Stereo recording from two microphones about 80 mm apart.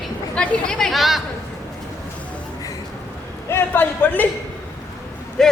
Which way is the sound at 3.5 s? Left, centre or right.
Left.